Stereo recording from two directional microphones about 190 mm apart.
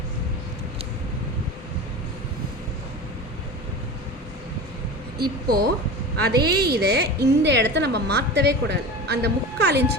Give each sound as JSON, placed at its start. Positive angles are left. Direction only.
{"t": 5.1, "sound": "a woman's voice", "side_deg": -55}